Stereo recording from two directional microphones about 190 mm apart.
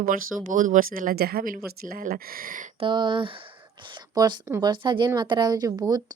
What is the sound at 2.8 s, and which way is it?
Speech, 25° right (ahead or behind).